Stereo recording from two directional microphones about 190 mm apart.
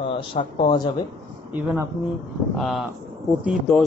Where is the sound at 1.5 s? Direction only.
10° right (ahead or behind).